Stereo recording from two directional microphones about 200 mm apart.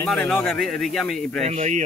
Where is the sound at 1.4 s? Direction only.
35° right (ahead or behind).